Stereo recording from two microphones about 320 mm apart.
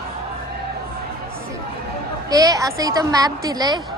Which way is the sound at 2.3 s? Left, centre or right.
Centre.